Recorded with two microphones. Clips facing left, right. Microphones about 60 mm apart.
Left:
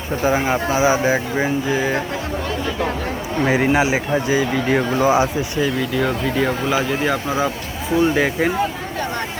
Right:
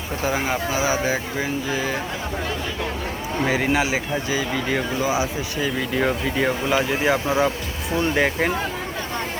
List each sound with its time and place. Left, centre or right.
0.3 s speech: left
3.4 s speech: centre
4.9 s speech: left
6.0 s speech: centre